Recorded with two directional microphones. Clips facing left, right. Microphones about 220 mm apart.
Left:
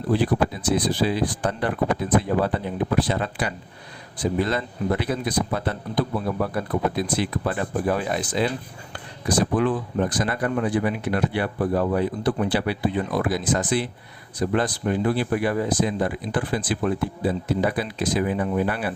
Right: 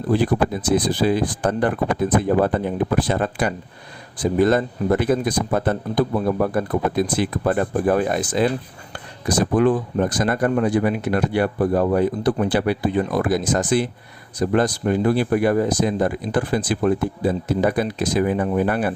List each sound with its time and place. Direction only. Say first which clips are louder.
0.1 s speech: right 3 dB; 50° right (ahead or behind)